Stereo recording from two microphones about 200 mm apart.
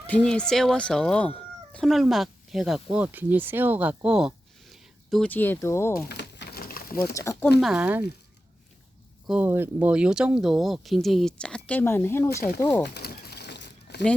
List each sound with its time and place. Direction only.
0.1 s speech: 5° left (ahead or behind)
6.1 s a sound: 55° left (ahead or behind)
7.0 s speech: 15° left (ahead or behind)
7.6 s speech: 5° right (ahead or behind)
9.2 s speech: 5° right (ahead or behind); by 12.9 s 10° left (ahead or behind)
12.9 s a sound: 50° left (ahead or behind)